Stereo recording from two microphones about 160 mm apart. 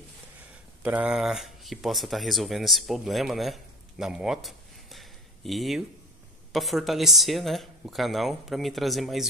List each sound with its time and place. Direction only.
0.8 s speech: 5° right (ahead or behind)